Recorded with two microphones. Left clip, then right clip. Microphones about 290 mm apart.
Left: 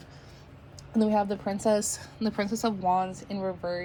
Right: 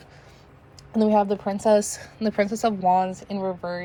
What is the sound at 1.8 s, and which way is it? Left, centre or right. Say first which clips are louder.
Speech: right 4 dB; right.